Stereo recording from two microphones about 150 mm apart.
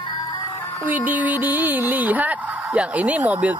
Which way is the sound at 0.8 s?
10° right (ahead or behind).